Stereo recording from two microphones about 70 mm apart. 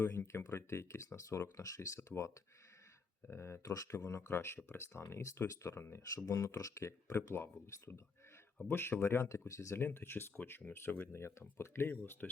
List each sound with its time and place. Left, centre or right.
0.0 s speech: left
4.3 s speech: left
9.7 s speech: left